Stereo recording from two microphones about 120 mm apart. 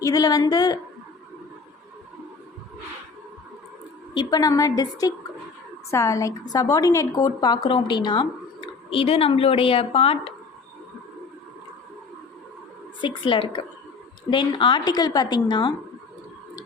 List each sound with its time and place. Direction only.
0.0 s a woman's voice: 30° left (ahead or behind)
4.1 s a woman's voice: 35° left (ahead or behind); by 10.3 s 50° left (ahead or behind)
13.0 s a woman's voice: 45° left (ahead or behind)